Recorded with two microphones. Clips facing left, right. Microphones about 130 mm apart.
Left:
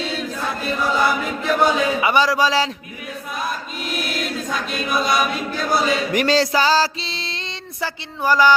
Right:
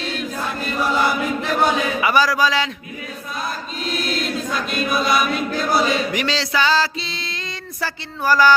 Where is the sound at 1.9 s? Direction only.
25° left (ahead or behind).